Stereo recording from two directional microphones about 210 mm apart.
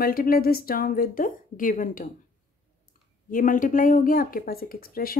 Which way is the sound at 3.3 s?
40° left (ahead or behind).